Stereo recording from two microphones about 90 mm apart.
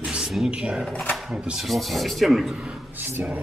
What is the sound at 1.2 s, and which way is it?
Speech, 5° right (ahead or behind).